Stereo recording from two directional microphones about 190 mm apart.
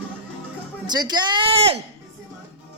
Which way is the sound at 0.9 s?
20° right (ahead or behind).